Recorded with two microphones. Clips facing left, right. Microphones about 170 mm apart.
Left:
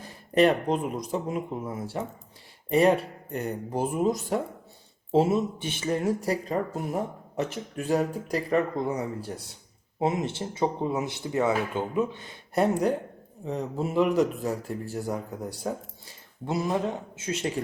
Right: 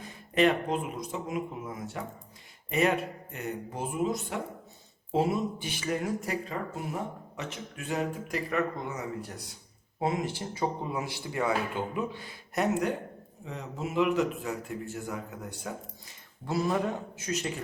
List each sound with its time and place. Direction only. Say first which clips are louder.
0.0 s speech: left 4 dB; 40° left (ahead or behind)
5.1 s speech: left 5 dB; 25° left (ahead or behind)
10.0 s speech: left 3 dB; 20° left (ahead or behind)
12.5 s speech: left 4 dB; 30° left (ahead or behind)
16.5 s speech: left 1 dB; 20° left (ahead or behind)